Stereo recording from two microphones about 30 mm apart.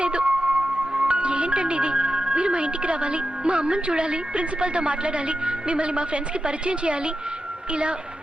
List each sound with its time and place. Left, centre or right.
0.0 s a woman's voice: right